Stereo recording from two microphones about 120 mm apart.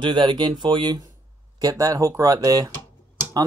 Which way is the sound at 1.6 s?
30° right (ahead or behind).